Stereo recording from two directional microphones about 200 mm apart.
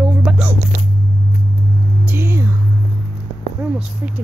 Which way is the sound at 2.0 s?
10° right (ahead or behind).